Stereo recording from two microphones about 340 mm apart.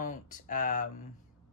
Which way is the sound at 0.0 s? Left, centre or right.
Left.